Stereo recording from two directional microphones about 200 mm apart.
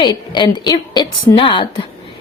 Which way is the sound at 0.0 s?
20° left (ahead or behind).